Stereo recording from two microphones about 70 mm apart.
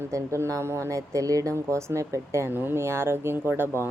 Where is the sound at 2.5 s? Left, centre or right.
Right.